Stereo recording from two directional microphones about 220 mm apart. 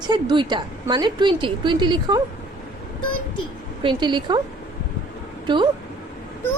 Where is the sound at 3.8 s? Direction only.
20° right (ahead or behind).